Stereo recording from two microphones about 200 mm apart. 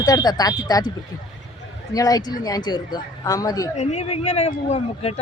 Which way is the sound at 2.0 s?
20° left (ahead or behind).